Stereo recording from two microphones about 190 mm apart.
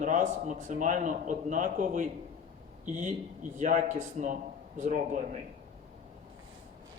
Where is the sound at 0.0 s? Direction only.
40° right (ahead or behind).